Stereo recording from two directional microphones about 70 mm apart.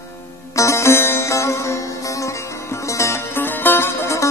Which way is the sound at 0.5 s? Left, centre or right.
Left.